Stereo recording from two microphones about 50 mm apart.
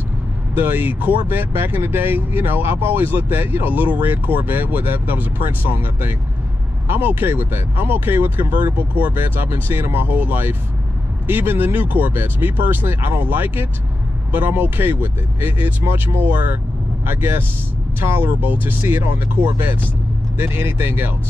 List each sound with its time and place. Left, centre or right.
0.6 s speech: right